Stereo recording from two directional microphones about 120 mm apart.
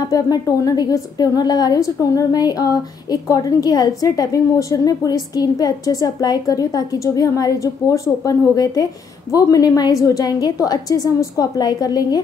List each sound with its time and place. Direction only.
0.1 s a woman's voice: 30° left (ahead or behind)